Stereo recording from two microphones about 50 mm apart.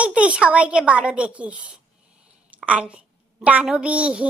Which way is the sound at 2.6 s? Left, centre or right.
Right.